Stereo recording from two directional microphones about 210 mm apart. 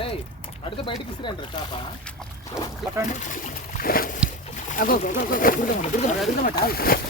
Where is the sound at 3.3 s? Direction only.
40° left (ahead or behind).